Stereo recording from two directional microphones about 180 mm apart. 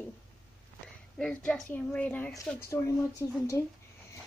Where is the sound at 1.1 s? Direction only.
5° left (ahead or behind).